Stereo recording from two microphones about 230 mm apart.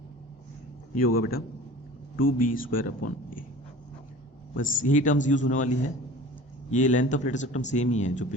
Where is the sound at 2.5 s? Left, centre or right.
Left.